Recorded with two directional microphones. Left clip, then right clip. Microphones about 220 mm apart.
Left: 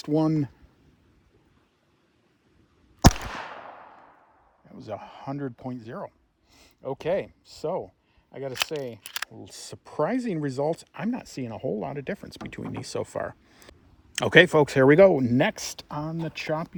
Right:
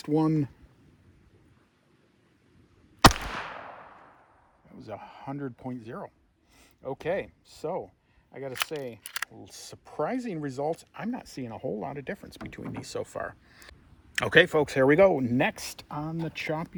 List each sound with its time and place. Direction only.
0.0 s speech: 40° left (ahead or behind)
4.7 s speech: 40° left (ahead or behind)